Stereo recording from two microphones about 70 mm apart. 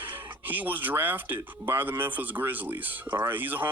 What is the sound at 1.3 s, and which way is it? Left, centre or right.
Speech, right.